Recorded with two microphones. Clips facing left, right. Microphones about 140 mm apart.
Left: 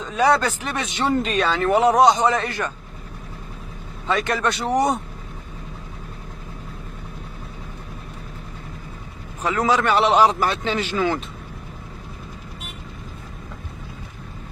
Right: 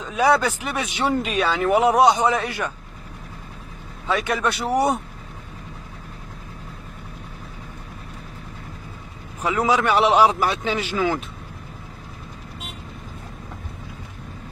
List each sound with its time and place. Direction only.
0.0 s speech: 10° right (ahead or behind)
4.1 s speech: 10° right (ahead or behind)
9.4 s speech: 10° right (ahead or behind)